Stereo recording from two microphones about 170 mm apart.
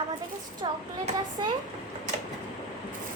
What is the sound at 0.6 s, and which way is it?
Speech, 30° right (ahead or behind).